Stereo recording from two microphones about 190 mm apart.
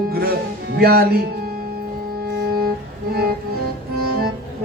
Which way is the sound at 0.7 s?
55° right (ahead or behind).